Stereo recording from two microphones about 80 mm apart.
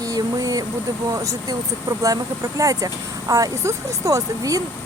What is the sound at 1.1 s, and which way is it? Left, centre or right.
Speech, right.